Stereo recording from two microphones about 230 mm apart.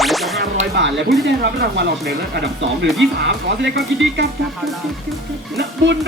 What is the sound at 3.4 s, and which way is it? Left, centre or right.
Speech, right.